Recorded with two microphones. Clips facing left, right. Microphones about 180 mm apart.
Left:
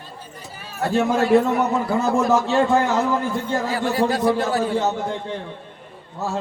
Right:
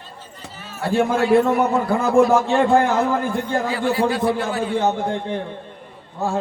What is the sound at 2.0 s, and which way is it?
A man's voice, 55° right (ahead or behind).